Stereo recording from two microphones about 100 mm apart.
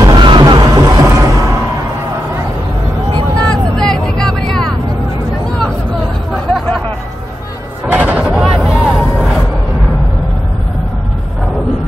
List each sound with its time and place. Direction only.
0.0 s music: 50° right (ahead or behind)
3.3 s vehicle: 10° left (ahead or behind)
6.3 s chatter: centre (ahead or behind)
7.9 s a sound: 15° right (ahead or behind)
8.3 s vehicle: centre (ahead or behind)